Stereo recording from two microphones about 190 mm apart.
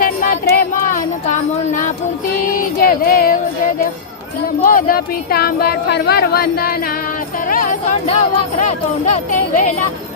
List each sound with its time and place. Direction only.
0.0 s music: 45° left (ahead or behind)
4.6 s speech: 50° left (ahead or behind)